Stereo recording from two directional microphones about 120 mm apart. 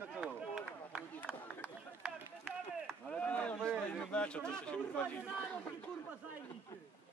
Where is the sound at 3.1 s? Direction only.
10° left (ahead or behind).